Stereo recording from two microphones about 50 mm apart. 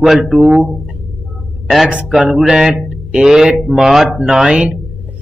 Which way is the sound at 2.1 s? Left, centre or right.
Centre.